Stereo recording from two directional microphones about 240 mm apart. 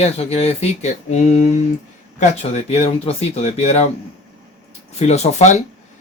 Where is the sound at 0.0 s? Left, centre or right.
Left.